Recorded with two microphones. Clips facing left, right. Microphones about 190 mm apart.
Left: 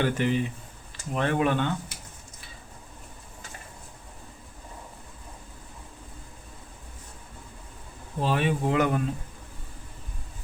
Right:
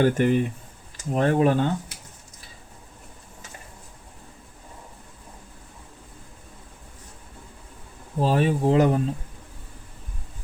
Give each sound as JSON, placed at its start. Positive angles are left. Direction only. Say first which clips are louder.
{"t": 0.0, "sound": "speech", "louder": "right 5 dB", "side_deg": -45}
{"t": 1.1, "sound": "speech", "louder": "right 5 dB", "side_deg": -40}
{"t": 8.2, "sound": "speech", "louder": "right 4 dB", "side_deg": -40}